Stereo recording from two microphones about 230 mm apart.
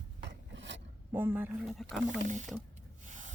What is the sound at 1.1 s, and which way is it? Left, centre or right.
Speech, centre.